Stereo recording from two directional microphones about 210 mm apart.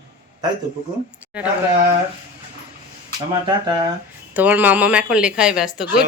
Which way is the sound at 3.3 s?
20° right (ahead or behind).